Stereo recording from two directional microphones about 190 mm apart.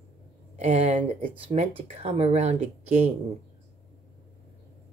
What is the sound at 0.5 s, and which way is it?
Speech, 35° right (ahead or behind).